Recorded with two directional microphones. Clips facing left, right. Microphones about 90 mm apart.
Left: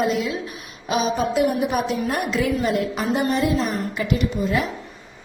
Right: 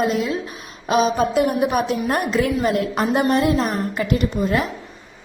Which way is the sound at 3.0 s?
60° right (ahead or behind).